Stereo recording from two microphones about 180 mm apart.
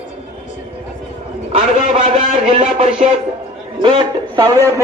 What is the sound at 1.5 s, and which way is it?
A man's voice, 40° right (ahead or behind).